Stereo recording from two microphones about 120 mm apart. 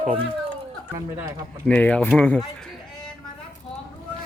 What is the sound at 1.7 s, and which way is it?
Speech, 10° left (ahead or behind).